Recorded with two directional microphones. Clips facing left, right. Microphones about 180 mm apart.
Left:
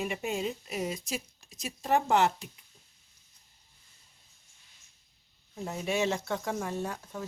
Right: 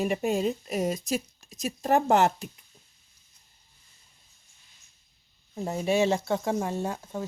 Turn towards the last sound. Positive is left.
turn(degrees=-30)  # may be behind; listen again after turning